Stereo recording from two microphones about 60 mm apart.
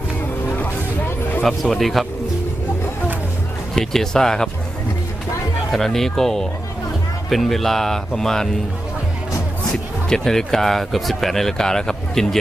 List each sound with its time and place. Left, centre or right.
0.6 s music: left
1.5 s speech: centre
3.8 s speech: centre
5.7 s speech: centre
10.1 s speech: centre